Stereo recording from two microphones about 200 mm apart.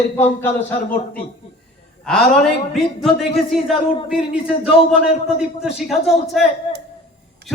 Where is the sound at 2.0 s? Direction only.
5° left (ahead or behind).